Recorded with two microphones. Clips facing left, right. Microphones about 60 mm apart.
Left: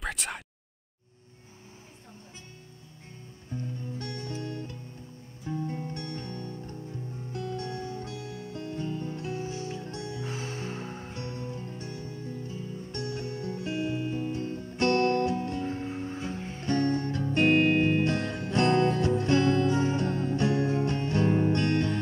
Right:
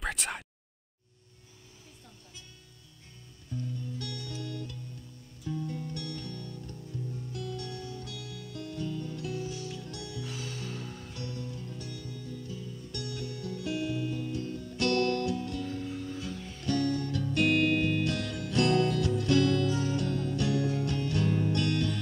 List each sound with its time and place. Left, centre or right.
0.0 s a sound: centre
3.4 s guitar: left
5.4 s music: left